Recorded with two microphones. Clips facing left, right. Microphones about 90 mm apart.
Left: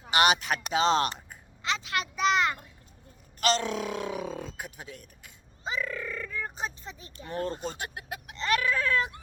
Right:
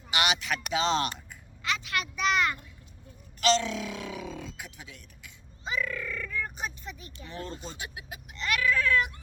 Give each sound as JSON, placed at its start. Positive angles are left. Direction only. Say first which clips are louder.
{"t": 0.1, "sound": "speech", "louder": "left 5 dB", "side_deg": 40}
{"t": 1.6, "sound": "speech", "louder": "left 1 dB", "side_deg": 30}
{"t": 3.4, "sound": "speech", "louder": "right 1 dB", "side_deg": 45}
{"t": 5.6, "sound": "speech", "louder": "even", "side_deg": 25}
{"t": 7.3, "sound": "speech", "louder": "left 7 dB", "side_deg": 45}
{"t": 8.4, "sound": "speech", "louder": "even", "side_deg": 30}